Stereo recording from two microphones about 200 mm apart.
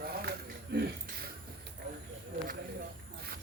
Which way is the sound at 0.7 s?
50° right (ahead or behind).